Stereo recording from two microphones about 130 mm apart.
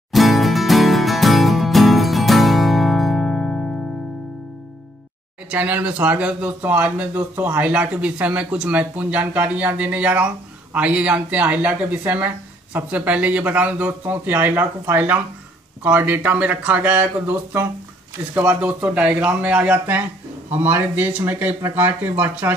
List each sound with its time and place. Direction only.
0.1 s music: centre (ahead or behind)
5.5 s speech: 10° right (ahead or behind)